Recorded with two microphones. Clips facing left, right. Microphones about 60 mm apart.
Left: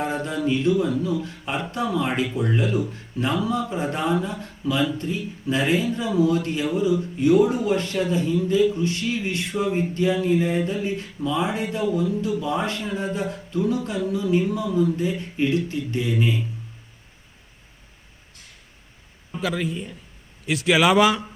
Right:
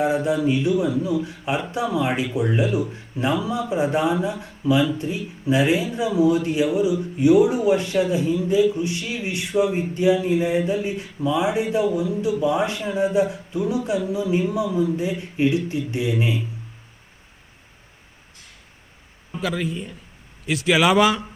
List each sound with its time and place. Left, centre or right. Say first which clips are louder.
0.0 s speech: right 5 dB; centre
19.3 s a man's voice: even; centre